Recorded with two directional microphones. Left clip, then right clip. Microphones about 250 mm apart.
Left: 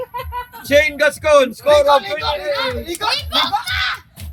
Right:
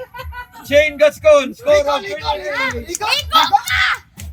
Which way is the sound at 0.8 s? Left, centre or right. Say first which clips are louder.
Right 3 dB; centre.